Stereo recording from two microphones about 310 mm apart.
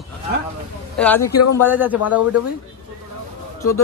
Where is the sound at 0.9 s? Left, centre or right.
Centre.